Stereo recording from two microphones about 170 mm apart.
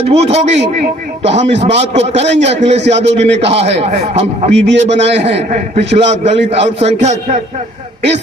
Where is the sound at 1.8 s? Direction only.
40° right (ahead or behind).